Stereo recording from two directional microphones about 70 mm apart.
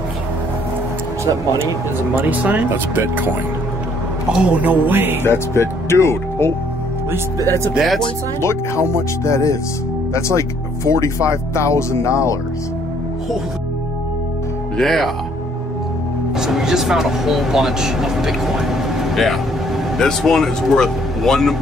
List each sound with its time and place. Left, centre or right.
2.1 s speech: right
4.3 s speech: centre; by 5.2 s right
5.2 s speech: left
7.7 s speech: centre
8.4 s speech: left
14.8 s speech: centre
16.3 s speech: centre